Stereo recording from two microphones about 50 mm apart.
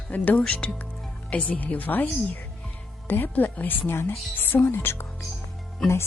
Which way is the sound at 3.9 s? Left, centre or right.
Left.